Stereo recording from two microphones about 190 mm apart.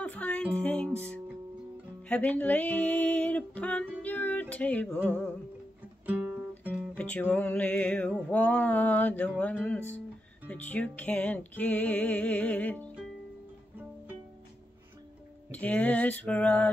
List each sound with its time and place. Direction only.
0.0 s music: 5° left (ahead or behind)
2.0 s a sound: 10° left (ahead or behind)
6.6 s music: 10° right (ahead or behind)
7.0 s music: 5° left (ahead or behind)
15.5 s music: 5° left (ahead or behind)